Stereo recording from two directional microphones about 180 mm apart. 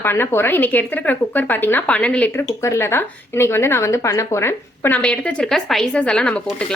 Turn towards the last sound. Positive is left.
turn(degrees=5)  # may be behind; listen again after turning